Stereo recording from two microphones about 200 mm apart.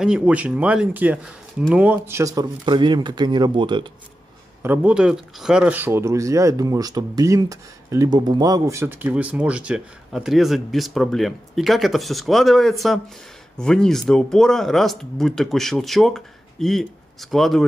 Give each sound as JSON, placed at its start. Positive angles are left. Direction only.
{"t": 0.0, "sound": "speech", "side_deg": -5}
{"t": 4.6, "sound": "speech", "side_deg": -5}